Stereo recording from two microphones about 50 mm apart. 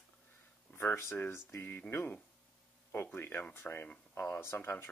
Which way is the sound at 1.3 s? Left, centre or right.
Left.